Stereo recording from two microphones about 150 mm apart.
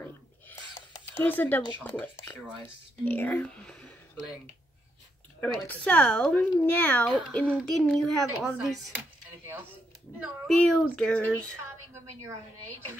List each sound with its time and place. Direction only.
0.0 s a sound: 15° left (ahead or behind)
2.6 s speech: 10° left (ahead or behind)
5.4 s a child's voice: 10° left (ahead or behind)
10.5 s speech: 5° left (ahead or behind)